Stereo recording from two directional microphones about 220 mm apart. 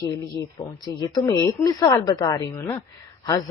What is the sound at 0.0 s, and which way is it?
Speech, 15° left (ahead or behind).